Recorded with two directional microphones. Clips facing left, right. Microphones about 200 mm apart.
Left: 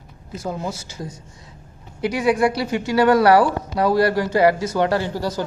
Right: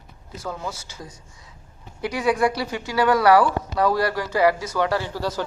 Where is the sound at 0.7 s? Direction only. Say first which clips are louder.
Left 5 dB; 45° left (ahead or behind).